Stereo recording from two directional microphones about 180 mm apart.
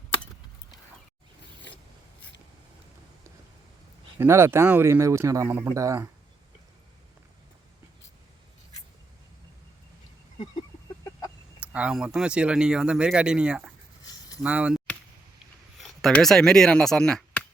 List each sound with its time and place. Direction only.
4.2 s speech: 15° right (ahead or behind)
11.6 s speech: 5° right (ahead or behind)
14.0 s a sound: 20° left (ahead or behind)
14.4 s speech: 5° right (ahead or behind)
15.8 s speech: centre (ahead or behind)